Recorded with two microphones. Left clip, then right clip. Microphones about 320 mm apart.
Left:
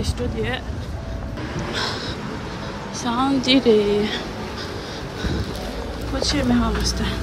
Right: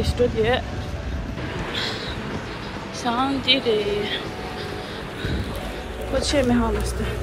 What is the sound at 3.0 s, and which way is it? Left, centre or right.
Speech, centre.